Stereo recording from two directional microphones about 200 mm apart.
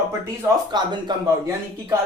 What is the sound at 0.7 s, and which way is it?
Speech, 20° right (ahead or behind).